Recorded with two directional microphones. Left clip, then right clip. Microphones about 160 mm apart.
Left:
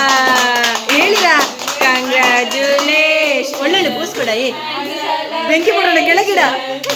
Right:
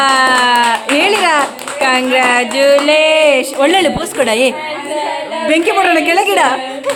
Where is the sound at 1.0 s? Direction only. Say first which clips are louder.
Even; 45° right (ahead or behind).